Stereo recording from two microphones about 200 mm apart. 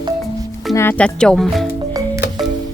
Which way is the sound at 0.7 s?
10° left (ahead or behind).